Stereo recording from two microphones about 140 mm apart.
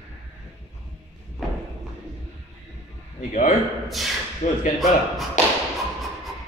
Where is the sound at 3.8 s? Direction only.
Centre (ahead or behind).